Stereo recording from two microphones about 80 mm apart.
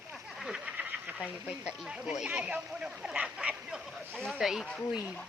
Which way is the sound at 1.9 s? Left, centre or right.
Centre.